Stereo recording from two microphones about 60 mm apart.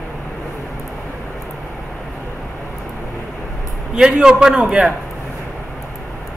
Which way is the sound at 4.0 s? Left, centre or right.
Centre.